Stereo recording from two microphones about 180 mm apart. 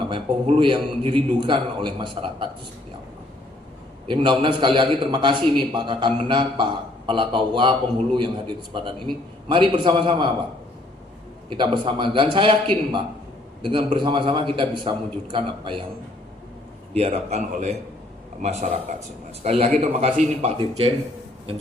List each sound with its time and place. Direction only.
0.1 s a man's voice: 30° right (ahead or behind)
4.1 s a man's voice: 25° right (ahead or behind)
11.4 s a man's voice: 25° right (ahead or behind)
16.9 s a man's voice: 35° right (ahead or behind)